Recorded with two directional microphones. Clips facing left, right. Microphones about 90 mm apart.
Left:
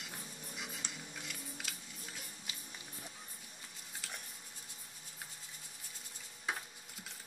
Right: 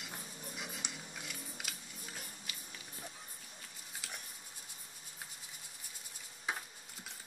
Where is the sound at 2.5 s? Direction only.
25° left (ahead or behind).